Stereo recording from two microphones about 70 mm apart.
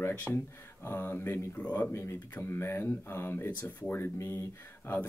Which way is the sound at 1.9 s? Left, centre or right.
Left.